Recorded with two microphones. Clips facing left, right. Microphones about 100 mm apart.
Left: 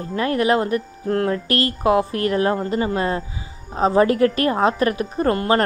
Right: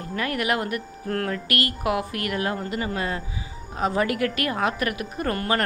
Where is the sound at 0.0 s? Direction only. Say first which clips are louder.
Left 7 dB; 30° left (ahead or behind).